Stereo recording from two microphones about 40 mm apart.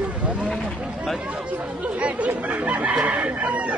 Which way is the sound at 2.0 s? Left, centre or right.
Right.